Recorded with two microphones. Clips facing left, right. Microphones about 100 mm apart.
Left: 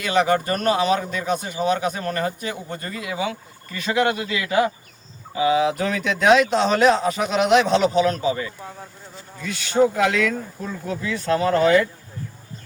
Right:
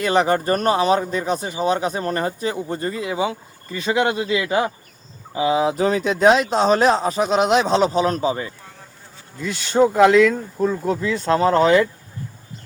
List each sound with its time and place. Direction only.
0.0 s speech: 35° right (ahead or behind)